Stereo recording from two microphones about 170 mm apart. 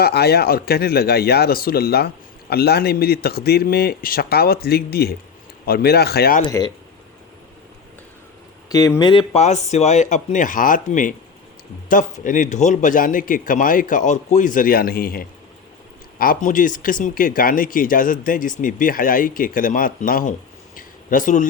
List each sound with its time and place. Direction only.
0.0 s speech: 70° left (ahead or behind)
8.7 s speech: 20° left (ahead or behind)
9.4 s speech: 40° left (ahead or behind)
20.7 s a sound: 50° left (ahead or behind)